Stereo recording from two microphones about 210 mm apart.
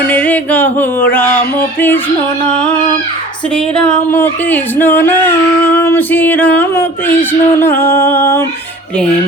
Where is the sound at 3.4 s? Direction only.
5° left (ahead or behind).